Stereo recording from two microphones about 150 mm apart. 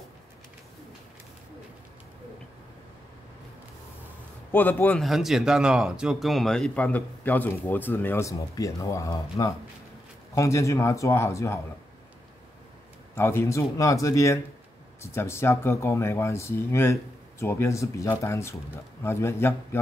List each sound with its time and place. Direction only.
4.5 s speech: 15° left (ahead or behind)
5.0 s speech: centre (ahead or behind); by 11.6 s 20° left (ahead or behind)
13.1 s speech: 15° left (ahead or behind)